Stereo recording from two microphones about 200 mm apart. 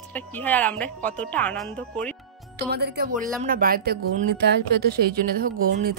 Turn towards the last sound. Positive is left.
turn(degrees=-45)  # may be behind; listen again after turning